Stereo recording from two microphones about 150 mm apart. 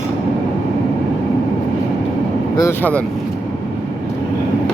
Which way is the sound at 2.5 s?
20° left (ahead or behind).